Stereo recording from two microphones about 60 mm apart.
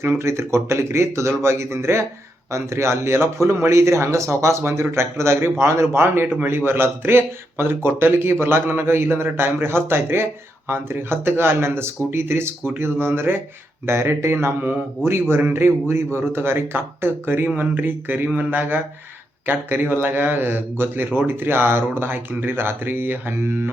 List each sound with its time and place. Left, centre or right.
0.0 s a man's voice: right